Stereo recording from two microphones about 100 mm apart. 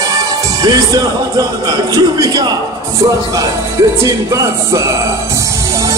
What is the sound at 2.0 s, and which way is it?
Music, 35° right (ahead or behind).